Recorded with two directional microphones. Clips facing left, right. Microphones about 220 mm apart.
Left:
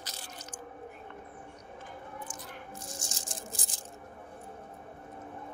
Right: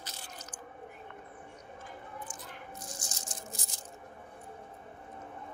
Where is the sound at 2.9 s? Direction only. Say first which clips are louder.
Left 2 dB; 30° left (ahead or behind).